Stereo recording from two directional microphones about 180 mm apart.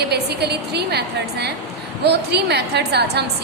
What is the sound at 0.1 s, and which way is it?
A woman's voice, 65° right (ahead or behind).